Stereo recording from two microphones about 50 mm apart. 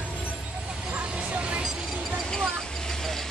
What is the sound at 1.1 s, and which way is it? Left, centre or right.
Vehicle, right.